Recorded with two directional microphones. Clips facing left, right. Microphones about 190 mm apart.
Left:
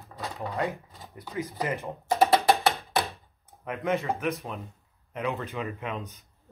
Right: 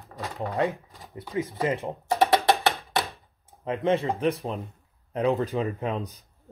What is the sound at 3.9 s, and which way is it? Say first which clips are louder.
Speech: right 4 dB; 30° right (ahead or behind).